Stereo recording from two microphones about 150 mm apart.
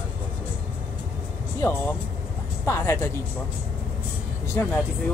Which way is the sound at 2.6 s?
20° left (ahead or behind).